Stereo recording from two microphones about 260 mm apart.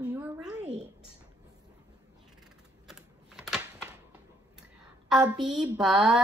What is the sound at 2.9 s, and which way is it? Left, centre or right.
Typing, centre.